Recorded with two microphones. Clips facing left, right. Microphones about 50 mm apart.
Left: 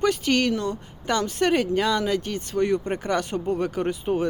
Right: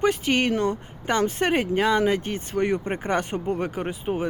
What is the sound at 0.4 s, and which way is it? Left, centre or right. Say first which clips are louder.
Speech: right 2 dB; right.